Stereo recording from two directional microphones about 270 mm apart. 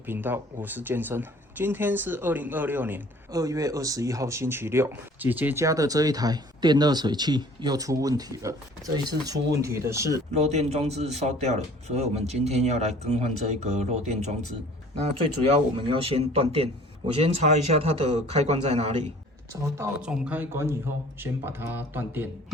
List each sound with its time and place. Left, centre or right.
0.0 s speech: centre
10.3 s a man's voice: right
15.7 s a man's voice: centre
19.7 s speech: centre